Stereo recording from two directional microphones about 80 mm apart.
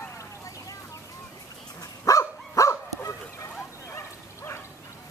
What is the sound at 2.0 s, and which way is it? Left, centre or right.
Dog, left.